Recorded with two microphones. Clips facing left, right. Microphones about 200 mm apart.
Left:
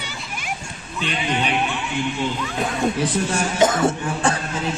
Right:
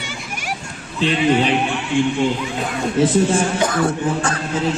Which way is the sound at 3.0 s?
25° right (ahead or behind).